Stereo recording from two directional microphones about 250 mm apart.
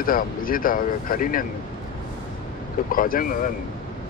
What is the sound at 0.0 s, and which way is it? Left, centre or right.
Speech, left.